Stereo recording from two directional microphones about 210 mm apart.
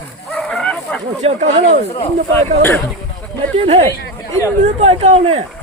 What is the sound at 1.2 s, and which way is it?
Speech, 35° right (ahead or behind).